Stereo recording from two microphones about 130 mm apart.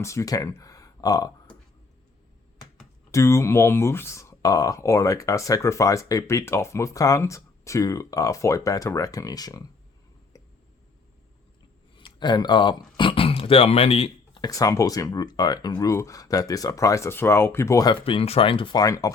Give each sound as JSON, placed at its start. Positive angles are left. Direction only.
{"t": 0.0, "sound": "speech", "side_deg": 25}
{"t": 3.1, "sound": "speech", "side_deg": 20}
{"t": 10.3, "sound": "a sound", "side_deg": 30}
{"t": 11.9, "sound": "a sound", "side_deg": 35}
{"t": 14.4, "sound": "speech", "side_deg": 25}
{"t": 18.0, "sound": "speech", "side_deg": 45}